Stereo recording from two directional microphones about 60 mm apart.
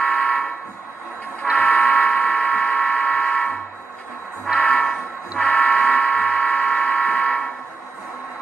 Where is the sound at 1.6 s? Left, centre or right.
Left.